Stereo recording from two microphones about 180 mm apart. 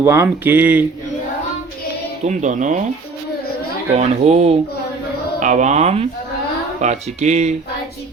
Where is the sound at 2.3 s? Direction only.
40° right (ahead or behind).